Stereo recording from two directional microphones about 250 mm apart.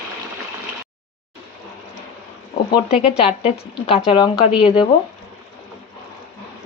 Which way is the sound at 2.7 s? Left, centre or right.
Left.